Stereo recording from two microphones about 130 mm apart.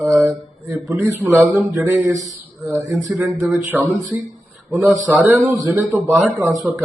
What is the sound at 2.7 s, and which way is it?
Speech, 25° right (ahead or behind).